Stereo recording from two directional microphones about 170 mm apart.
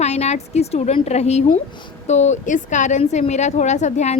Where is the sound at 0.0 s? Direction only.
40° left (ahead or behind).